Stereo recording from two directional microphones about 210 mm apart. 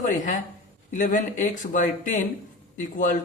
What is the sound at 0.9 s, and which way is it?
Speech, 40° left (ahead or behind).